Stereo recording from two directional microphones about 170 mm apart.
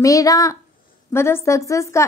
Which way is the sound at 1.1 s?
15° left (ahead or behind).